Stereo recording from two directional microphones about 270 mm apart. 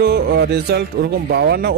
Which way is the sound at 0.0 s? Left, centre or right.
Right.